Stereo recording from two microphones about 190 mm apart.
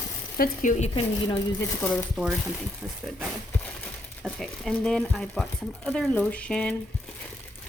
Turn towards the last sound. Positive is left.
turn(degrees=5)  # may be behind; listen again after turning